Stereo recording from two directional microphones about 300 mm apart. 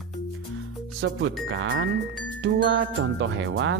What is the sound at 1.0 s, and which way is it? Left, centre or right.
Speech, right.